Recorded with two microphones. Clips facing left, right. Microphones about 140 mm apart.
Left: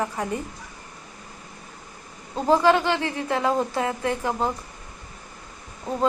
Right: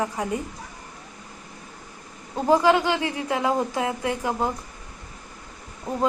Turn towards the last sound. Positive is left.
turn(degrees=-15)  # may be behind; listen again after turning